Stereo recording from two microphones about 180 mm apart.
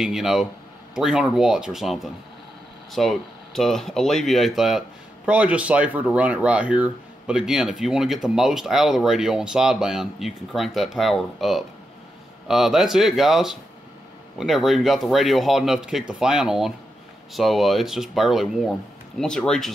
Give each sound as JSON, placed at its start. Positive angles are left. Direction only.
{"t": 0.0, "sound": "speech", "side_deg": 0}